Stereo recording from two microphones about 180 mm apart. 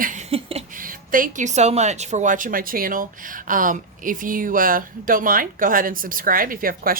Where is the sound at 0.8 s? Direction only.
50° right (ahead or behind).